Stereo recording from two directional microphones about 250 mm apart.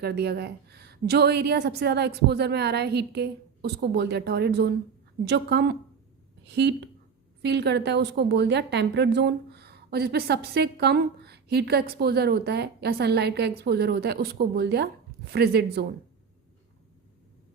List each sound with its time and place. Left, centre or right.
0.0 s a woman's voice: right